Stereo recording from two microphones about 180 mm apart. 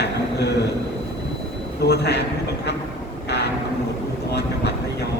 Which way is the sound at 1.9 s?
65° left (ahead or behind).